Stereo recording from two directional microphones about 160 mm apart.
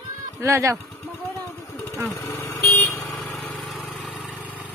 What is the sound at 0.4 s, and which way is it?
Speech, 15° right (ahead or behind).